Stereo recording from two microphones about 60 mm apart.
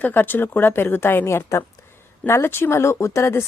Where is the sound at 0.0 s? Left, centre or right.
Left.